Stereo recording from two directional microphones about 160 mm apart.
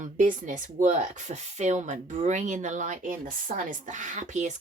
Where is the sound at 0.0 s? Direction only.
50° right (ahead or behind).